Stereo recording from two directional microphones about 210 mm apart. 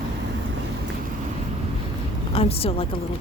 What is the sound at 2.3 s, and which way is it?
Speech, 25° left (ahead or behind).